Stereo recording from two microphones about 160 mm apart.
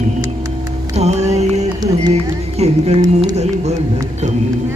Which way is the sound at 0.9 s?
45° right (ahead or behind).